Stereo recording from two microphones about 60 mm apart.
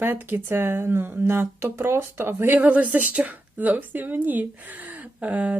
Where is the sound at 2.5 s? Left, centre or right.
Right.